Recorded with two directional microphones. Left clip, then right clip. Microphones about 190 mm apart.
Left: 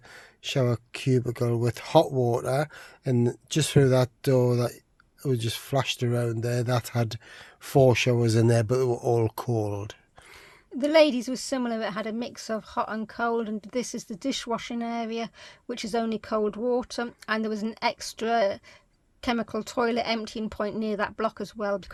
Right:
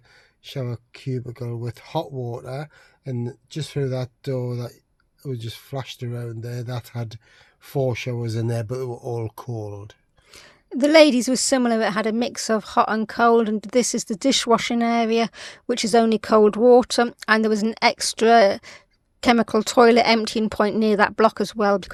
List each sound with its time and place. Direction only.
0.4 s speech: 25° left (ahead or behind)
10.7 s a woman's voice: 35° right (ahead or behind)